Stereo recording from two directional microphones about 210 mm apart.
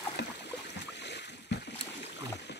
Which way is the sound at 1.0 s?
55° left (ahead or behind).